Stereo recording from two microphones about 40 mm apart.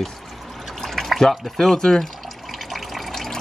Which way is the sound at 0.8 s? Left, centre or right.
Centre.